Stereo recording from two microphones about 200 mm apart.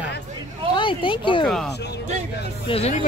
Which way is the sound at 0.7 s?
25° left (ahead or behind).